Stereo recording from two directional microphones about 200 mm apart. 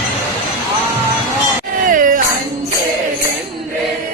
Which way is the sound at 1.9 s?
40° right (ahead or behind).